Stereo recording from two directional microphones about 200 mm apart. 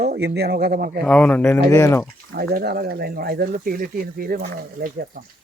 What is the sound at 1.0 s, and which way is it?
Speech, 5° left (ahead or behind).